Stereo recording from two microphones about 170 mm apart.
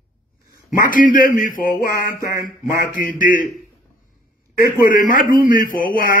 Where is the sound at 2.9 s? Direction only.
55° left (ahead or behind).